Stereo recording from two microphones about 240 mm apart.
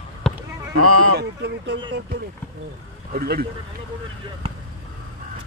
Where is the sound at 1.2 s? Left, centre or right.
Right.